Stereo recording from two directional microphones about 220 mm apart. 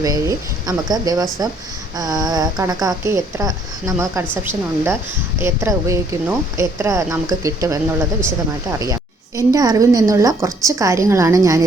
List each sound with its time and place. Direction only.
0.0 s a woman's voice: 15° right (ahead or behind)
8.8 s a woman's voice: 15° right (ahead or behind)